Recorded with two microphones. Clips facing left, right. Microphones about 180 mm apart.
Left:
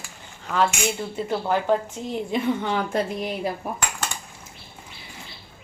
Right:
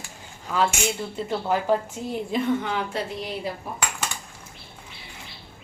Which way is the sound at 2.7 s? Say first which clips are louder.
Left 4 dB; 50° left (ahead or behind).